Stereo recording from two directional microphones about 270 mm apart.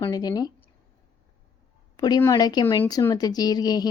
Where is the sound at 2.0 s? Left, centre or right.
Centre.